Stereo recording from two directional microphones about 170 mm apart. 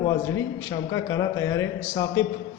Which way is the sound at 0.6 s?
20° left (ahead or behind).